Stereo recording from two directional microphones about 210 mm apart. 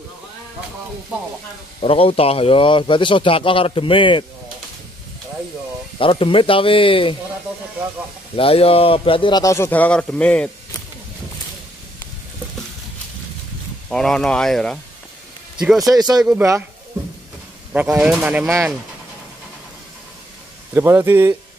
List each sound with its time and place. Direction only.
1.8 s a man's voice: 25° left (ahead or behind)
5.9 s a man's voice: 25° left (ahead or behind)
8.4 s a man's voice: 25° left (ahead or behind); by 10.8 s 5° left (ahead or behind)
13.8 s speech: 5° left (ahead or behind)
15.9 s speech: 20° right (ahead or behind)
17.7 s speech: 5° right (ahead or behind)
20.7 s speech: 10° right (ahead or behind)